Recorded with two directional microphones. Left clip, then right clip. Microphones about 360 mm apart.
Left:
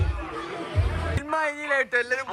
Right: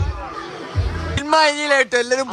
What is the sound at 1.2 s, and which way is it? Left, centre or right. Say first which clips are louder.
A man's voice: right 12 dB; centre.